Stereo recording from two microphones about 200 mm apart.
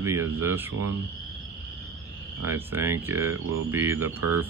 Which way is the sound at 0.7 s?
90° right.